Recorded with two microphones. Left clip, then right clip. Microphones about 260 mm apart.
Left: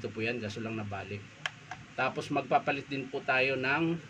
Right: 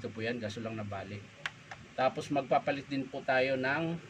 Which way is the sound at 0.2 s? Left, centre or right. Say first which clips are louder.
Left 2 dB; centre.